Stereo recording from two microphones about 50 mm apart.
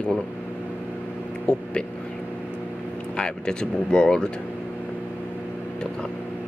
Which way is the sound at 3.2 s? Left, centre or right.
Centre.